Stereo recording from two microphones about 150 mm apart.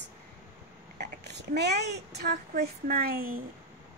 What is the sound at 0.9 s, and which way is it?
Speech, 90° right.